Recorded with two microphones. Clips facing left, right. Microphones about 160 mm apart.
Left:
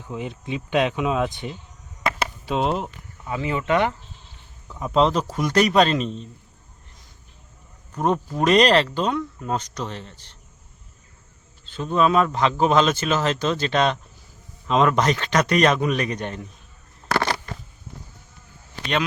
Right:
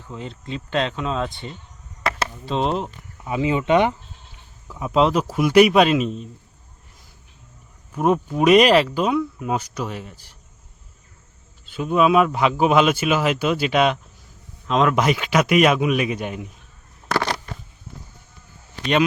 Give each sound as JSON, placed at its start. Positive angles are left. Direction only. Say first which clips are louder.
{"t": 0.1, "sound": "speech", "louder": "left 2 dB", "side_deg": 15}
{"t": 3.2, "sound": "speech", "louder": "right 4 dB", "side_deg": -15}
{"t": 4.7, "sound": "speech", "louder": "right 1 dB", "side_deg": -5}
{"t": 7.9, "sound": "speech", "louder": "right 3 dB", "side_deg": -5}
{"t": 11.6, "sound": "speech", "louder": "right 2 dB", "side_deg": -10}
{"t": 17.2, "sound": "a sound", "louder": "even", "side_deg": -5}